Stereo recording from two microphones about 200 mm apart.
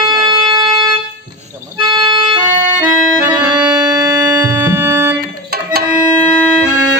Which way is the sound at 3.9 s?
20° right (ahead or behind).